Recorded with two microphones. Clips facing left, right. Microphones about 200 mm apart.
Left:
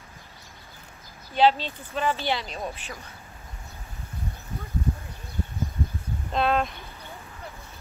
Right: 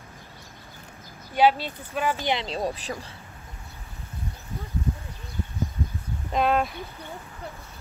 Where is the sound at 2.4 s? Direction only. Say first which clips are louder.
Right 6 dB; 30° right (ahead or behind).